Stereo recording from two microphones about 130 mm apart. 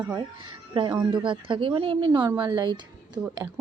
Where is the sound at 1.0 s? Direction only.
40° right (ahead or behind).